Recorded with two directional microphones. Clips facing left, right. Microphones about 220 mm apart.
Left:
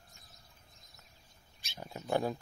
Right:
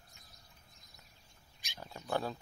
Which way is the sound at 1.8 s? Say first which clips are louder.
Left 4 dB; 15° left (ahead or behind).